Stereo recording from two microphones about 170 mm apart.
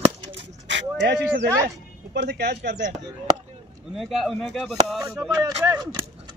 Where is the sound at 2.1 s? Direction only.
75° right (ahead or behind).